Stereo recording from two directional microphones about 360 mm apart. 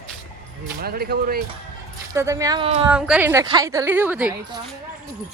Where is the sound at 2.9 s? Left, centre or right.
Centre.